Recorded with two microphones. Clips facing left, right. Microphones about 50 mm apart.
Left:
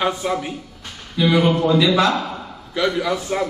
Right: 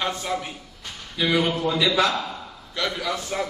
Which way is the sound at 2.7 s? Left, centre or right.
Centre.